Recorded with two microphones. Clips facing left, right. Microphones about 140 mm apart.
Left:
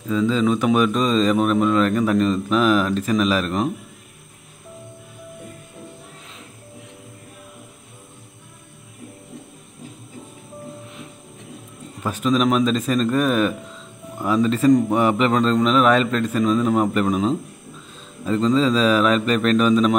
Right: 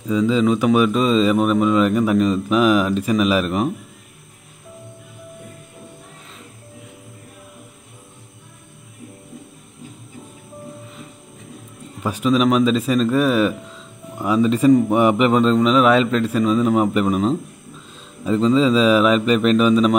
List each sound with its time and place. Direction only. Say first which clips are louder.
0.3 s a man's voice: right 3 dB; 5° right (ahead or behind)
12.0 s a man's voice: right 2 dB; 10° right (ahead or behind)